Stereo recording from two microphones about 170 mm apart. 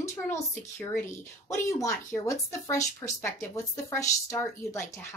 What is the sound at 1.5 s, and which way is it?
A woman's voice, 20° left (ahead or behind).